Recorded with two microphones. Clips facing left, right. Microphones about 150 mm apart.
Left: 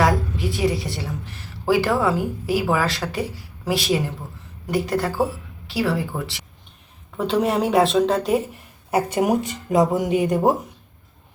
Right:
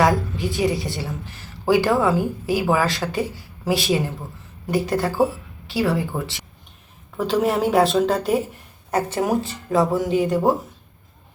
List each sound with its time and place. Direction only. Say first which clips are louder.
0.0 s a woman's voice: right 1 dB; centre (ahead or behind)
8.9 s speech: left 2 dB; 10° left (ahead or behind)